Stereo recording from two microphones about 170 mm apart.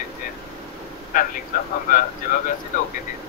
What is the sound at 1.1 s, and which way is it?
Speech, 55° left (ahead or behind).